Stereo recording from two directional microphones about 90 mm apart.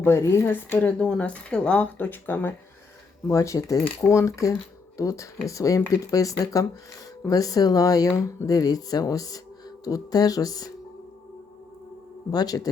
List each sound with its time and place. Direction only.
0.0 s a woman's voice: 30° left (ahead or behind)
0.8 s speech: 10° left (ahead or behind)
3.2 s speech: 35° left (ahead or behind)
12.3 s speech: 45° left (ahead or behind)